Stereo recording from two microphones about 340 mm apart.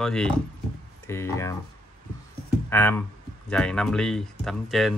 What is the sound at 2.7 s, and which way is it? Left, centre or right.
Speech, centre.